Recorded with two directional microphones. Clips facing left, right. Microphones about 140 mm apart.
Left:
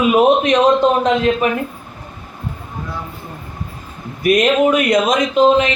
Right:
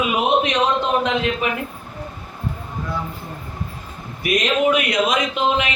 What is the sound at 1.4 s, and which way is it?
Speech, 40° left (ahead or behind).